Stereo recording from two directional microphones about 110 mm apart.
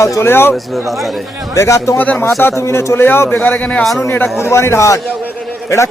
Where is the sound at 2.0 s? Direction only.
15° left (ahead or behind).